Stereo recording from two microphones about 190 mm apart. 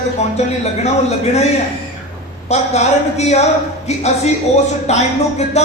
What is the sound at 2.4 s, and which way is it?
Speech, 35° left (ahead or behind).